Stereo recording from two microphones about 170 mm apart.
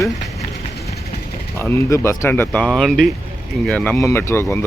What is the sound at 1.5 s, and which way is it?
Speech, 15° left (ahead or behind).